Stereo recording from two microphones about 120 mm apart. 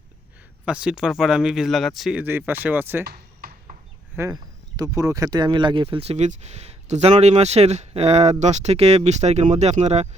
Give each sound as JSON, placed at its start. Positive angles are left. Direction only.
{"t": 0.6, "sound": "speech", "side_deg": -10}
{"t": 2.2, "sound": "speech", "side_deg": -15}
{"t": 3.7, "sound": "a sound", "side_deg": -90}
{"t": 4.2, "sound": "speech", "side_deg": -15}
{"t": 4.8, "sound": "speech", "side_deg": -30}